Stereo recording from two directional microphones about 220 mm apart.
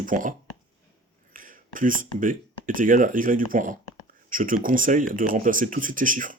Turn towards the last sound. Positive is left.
turn(degrees=-35)  # may be behind; listen again after turning